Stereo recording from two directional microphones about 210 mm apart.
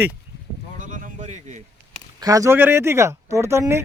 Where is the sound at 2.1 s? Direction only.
15° right (ahead or behind).